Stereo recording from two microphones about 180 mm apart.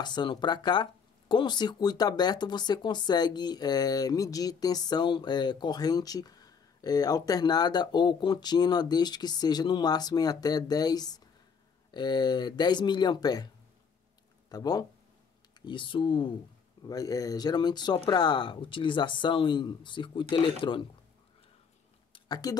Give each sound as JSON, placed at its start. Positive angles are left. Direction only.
{"t": 0.0, "sound": "speech", "side_deg": 25}
{"t": 14.5, "sound": "speech", "side_deg": 20}
{"t": 22.1, "sound": "a sound", "side_deg": 20}